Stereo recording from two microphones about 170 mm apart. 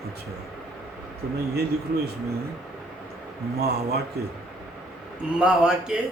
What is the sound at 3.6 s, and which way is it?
Speech, 70° right (ahead or behind).